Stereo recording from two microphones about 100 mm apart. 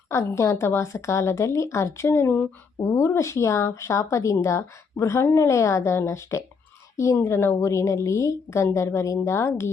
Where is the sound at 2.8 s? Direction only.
30° left (ahead or behind).